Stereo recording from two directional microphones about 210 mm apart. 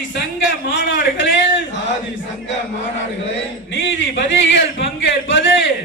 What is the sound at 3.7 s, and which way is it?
Speech, 60° left (ahead or behind).